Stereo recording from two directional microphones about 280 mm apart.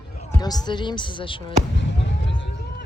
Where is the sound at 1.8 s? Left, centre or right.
Left.